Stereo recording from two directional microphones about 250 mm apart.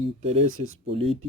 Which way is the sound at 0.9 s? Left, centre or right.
Right.